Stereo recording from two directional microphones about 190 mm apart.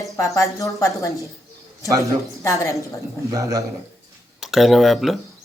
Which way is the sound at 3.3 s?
20° right (ahead or behind).